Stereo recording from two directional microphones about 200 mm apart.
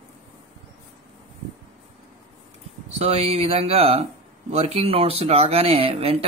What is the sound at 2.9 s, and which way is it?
Speech, 30° right (ahead or behind).